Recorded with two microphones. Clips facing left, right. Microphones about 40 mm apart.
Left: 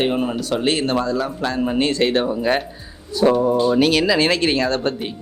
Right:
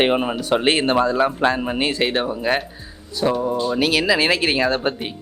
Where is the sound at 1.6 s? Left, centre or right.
Centre.